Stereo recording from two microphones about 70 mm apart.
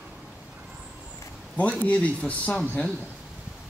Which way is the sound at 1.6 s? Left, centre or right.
Left.